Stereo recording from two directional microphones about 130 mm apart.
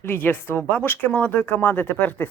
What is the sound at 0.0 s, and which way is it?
Speech, 15° left (ahead or behind).